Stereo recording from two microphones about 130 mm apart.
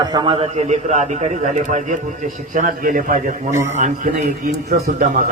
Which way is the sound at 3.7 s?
65° right (ahead or behind).